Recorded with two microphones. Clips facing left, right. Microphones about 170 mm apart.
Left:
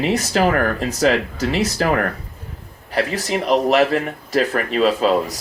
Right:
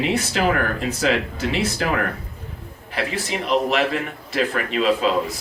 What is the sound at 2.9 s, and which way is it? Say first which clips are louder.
Speech: left 5 dB; 40° left (ahead or behind).